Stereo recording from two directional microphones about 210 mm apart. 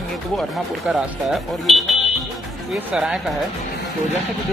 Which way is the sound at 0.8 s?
Centre (ahead or behind).